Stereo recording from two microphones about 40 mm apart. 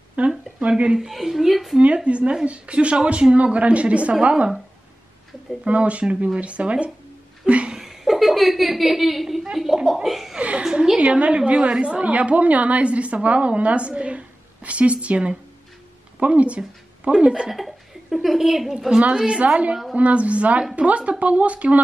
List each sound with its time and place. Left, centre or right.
0.2 s a sound: right
0.6 s speech: right
0.9 s a woman's voice: centre
2.0 s a woman's voice: right
5.7 s a woman's voice: right
7.4 s a sound: right
7.8 s a sound: centre
9.8 s a woman's voice: centre
10.0 s speech: centre
10.6 s a woman's voice: right
11.0 s a woman's voice: right
17.3 s speech: centre
17.6 s a sound: centre
18.9 s a woman's voice: right